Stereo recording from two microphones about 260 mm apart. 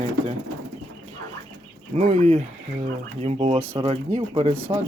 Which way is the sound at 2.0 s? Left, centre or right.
Right.